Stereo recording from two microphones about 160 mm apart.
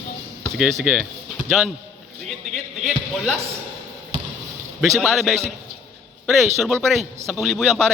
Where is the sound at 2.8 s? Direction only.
Centre (ahead or behind).